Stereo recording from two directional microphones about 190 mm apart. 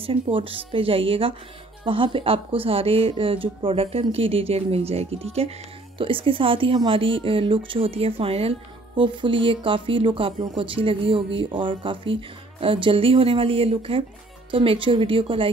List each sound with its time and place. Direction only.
0.0 s speech: 30° right (ahead or behind)